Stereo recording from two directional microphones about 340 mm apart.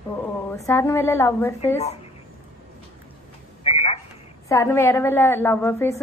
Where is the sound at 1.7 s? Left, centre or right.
Centre.